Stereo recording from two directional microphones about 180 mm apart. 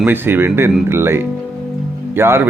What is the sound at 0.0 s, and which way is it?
Speech, 10° right (ahead or behind).